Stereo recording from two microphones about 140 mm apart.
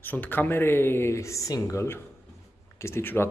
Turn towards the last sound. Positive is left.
turn(degrees=15)  # may be behind; listen again after turning